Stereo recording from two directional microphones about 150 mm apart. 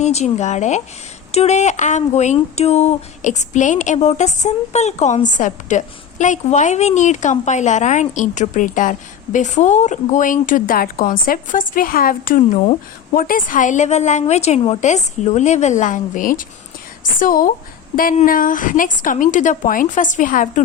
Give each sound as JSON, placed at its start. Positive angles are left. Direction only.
{"t": 0.0, "sound": "a woman's voice", "side_deg": 50}